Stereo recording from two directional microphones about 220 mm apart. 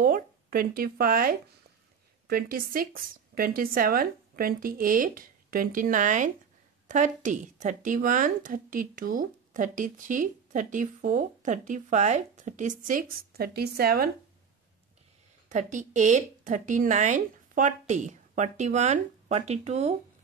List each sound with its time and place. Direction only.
0.0 s speech: 40° right (ahead or behind)
15.5 s speech: 35° right (ahead or behind)